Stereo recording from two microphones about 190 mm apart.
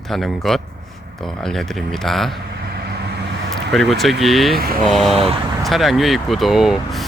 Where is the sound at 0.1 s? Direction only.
Centre (ahead or behind).